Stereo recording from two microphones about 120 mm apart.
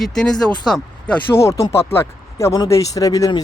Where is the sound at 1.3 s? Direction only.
25° left (ahead or behind).